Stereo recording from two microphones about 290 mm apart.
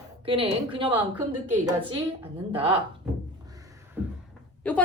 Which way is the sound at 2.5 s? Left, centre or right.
Centre.